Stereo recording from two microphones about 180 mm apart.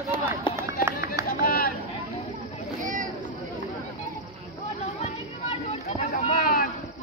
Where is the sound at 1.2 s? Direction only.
55° left (ahead or behind).